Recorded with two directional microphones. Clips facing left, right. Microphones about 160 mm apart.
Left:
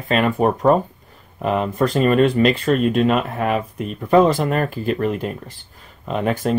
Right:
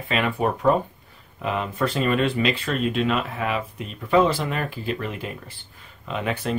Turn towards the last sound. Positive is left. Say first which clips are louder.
# left 6 dB
turn(degrees=45)  # may be behind; listen again after turning